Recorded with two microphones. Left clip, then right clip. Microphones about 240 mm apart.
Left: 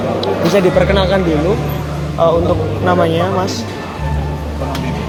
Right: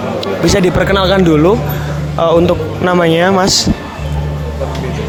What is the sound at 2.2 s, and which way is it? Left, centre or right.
A man's voice, right.